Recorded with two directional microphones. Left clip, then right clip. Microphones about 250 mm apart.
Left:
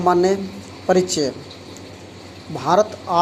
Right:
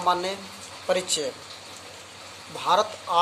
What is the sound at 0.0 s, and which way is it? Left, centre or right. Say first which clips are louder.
Speech: left 8 dB; centre.